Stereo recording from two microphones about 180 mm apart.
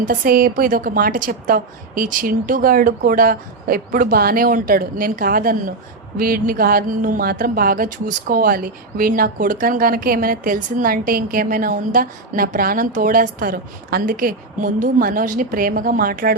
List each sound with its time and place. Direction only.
0.0 s speech: 50° right (ahead or behind)